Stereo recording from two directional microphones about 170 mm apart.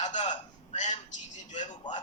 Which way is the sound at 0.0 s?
45° left (ahead or behind).